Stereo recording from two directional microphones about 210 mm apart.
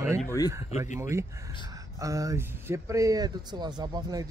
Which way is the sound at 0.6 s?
35° left (ahead or behind).